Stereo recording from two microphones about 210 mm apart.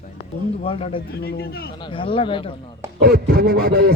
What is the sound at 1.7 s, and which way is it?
Speech, 25° left (ahead or behind).